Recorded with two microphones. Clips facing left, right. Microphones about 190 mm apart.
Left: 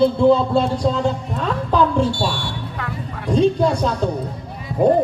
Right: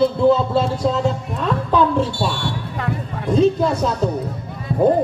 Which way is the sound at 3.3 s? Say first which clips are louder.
Even; 5° right (ahead or behind).